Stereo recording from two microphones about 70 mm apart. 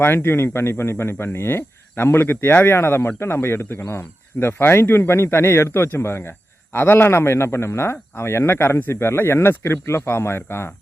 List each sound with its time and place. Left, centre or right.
0.0 s speech: left